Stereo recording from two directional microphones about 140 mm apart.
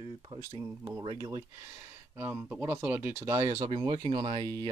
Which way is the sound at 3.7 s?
40° right (ahead or behind).